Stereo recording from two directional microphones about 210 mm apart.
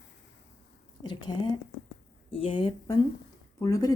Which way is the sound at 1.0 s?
20° left (ahead or behind).